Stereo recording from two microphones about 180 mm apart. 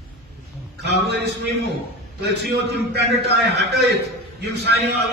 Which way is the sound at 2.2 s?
65° right (ahead or behind).